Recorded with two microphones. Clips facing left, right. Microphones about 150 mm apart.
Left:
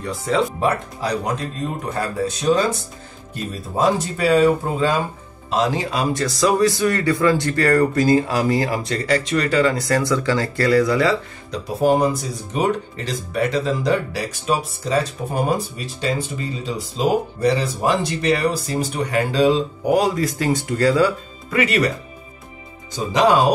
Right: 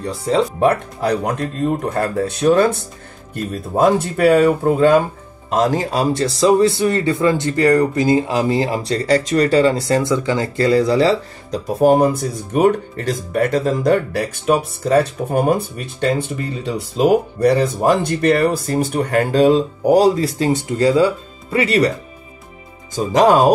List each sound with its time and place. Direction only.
0.6 s speech: 55° right (ahead or behind)
5.5 s a man's voice: 45° right (ahead or behind); by 11.6 s 30° right (ahead or behind)
11.6 s speech: 50° right (ahead or behind); by 21.9 s 35° right (ahead or behind)
22.9 s speech: 45° right (ahead or behind)